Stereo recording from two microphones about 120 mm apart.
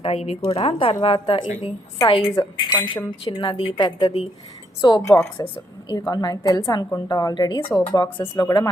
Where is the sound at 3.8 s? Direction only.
35° left (ahead or behind).